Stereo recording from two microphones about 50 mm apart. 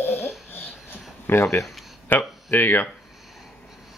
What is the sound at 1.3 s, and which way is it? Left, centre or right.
Speech, left.